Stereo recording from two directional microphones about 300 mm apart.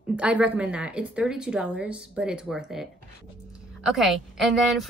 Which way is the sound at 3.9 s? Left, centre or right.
Centre.